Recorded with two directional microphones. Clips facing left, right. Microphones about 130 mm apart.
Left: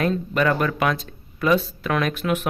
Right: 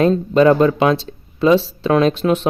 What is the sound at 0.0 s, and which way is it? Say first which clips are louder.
Speech: right 9 dB; 25° right (ahead or behind).